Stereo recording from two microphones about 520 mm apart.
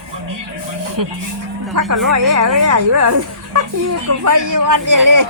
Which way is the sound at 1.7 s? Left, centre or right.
Right.